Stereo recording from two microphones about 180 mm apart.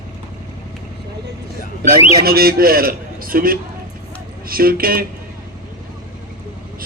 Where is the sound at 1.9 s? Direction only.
55° right (ahead or behind).